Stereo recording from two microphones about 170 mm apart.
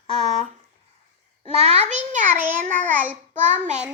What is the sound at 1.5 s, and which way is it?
Speech, 40° right (ahead or behind).